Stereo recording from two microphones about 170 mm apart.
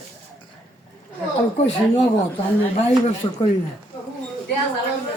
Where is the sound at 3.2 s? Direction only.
25° left (ahead or behind).